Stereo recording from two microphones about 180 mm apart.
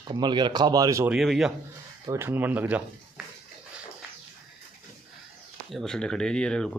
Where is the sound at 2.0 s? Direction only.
10° right (ahead or behind).